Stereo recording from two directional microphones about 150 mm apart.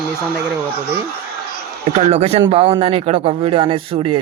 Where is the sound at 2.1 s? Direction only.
45° right (ahead or behind).